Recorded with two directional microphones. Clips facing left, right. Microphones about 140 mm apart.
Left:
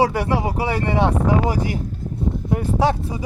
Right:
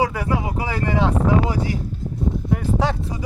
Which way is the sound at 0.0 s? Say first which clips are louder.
Left 3 dB; 35° left (ahead or behind).